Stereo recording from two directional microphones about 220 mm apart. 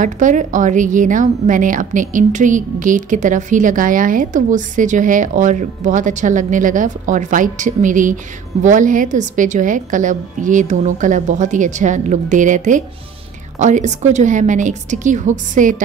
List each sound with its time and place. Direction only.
0.0 s a woman's voice: 35° right (ahead or behind)